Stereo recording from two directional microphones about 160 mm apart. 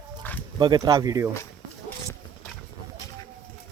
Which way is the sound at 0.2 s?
10° left (ahead or behind).